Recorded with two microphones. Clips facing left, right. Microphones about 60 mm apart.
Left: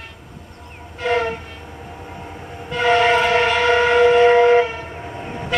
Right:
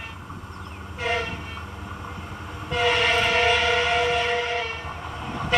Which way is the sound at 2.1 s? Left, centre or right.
Left.